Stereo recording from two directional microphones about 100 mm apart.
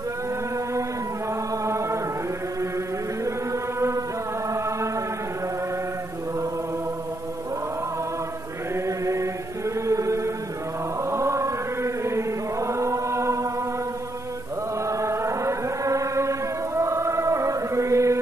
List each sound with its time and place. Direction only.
1.6 s chant: 30° right (ahead or behind)
8.8 s chant: 30° right (ahead or behind)
14.9 s chant: 30° right (ahead or behind)